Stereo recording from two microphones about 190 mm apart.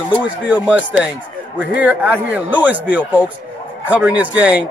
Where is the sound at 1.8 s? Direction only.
10° right (ahead or behind).